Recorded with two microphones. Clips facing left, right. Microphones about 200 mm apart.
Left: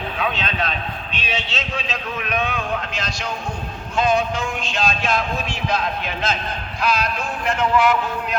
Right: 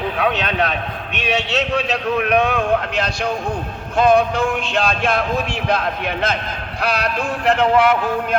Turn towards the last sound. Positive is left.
turn(degrees=-55)  # may be behind; listen again after turning